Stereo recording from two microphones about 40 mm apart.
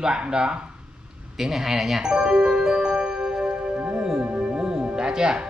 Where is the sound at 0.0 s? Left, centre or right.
Centre.